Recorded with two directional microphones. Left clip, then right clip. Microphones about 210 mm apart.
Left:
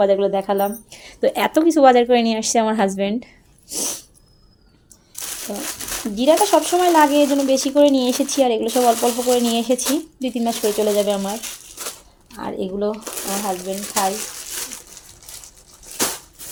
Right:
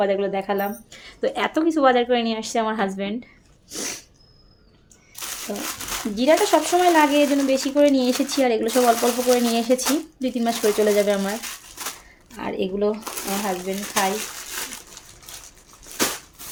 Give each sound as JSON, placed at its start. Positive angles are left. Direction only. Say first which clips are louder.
{"t": 0.0, "sound": "speech", "louder": "left 5 dB", "side_deg": 25}
{"t": 3.7, "sound": "sneeze", "louder": "left 4 dB", "side_deg": 20}
{"t": 5.1, "sound": "crumpling", "louder": "left 1 dB", "side_deg": 5}
{"t": 6.2, "sound": "speech", "louder": "left 3 dB", "side_deg": 15}
{"t": 8.7, "sound": "speech", "louder": "left 2 dB", "side_deg": -5}
{"t": 9.3, "sound": "speech", "louder": "left 1 dB", "side_deg": 10}
{"t": 12.4, "sound": "speech", "louder": "even", "side_deg": 10}